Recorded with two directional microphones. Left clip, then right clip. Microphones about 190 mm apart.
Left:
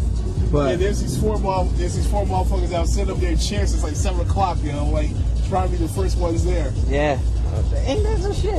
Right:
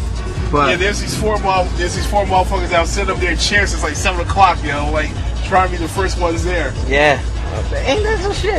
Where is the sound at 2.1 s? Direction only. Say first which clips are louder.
Right 10 dB; 25° right (ahead or behind).